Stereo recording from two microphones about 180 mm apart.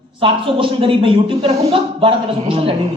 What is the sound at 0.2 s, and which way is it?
A man's voice, 30° right (ahead or behind).